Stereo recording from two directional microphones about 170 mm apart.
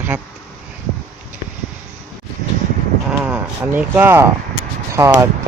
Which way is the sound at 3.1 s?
10° right (ahead or behind).